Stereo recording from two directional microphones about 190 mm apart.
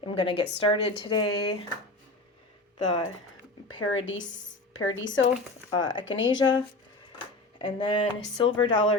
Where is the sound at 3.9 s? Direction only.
90° left.